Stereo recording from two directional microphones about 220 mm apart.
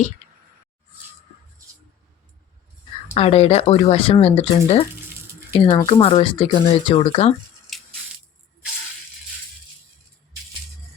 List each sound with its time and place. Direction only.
3.2 s speech: 25° left (ahead or behind)
7.7 s crushing: centre (ahead or behind)